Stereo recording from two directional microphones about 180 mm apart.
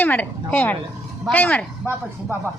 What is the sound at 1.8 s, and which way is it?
Speech, 15° right (ahead or behind).